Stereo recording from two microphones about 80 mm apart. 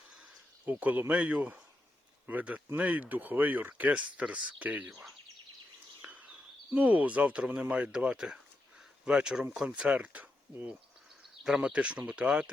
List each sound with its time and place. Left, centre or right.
0.6 s speech: right
6.1 s a sound: centre
6.7 s speech: centre